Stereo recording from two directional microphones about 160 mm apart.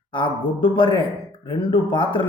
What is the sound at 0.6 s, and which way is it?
Speech, 30° left (ahead or behind).